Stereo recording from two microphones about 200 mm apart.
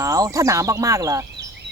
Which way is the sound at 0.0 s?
15° right (ahead or behind).